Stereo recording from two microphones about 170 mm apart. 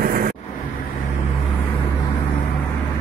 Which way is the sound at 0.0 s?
60° right (ahead or behind).